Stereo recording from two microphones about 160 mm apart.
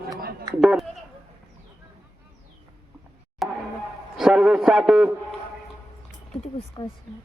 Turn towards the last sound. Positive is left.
turn(degrees=30)  # may be behind; listen again after turning